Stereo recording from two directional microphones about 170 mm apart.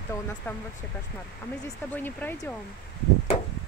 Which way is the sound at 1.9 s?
10° left (ahead or behind).